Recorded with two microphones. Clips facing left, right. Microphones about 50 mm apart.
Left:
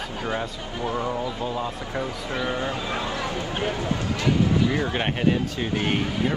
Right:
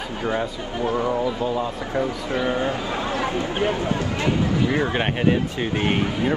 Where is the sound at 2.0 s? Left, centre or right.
Right.